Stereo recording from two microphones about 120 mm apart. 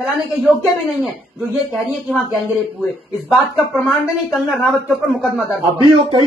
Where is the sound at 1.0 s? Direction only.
5° right (ahead or behind).